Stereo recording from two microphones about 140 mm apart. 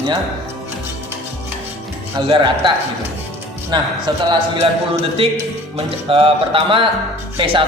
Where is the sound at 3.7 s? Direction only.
35° right (ahead or behind).